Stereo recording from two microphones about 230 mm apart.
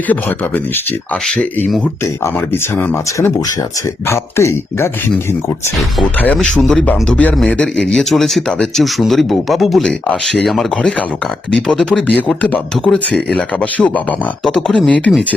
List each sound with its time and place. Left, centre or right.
0.1 s speech: centre
6.0 s speech: centre